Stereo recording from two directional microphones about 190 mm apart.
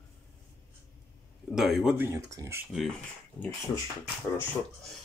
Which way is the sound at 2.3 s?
15° right (ahead or behind).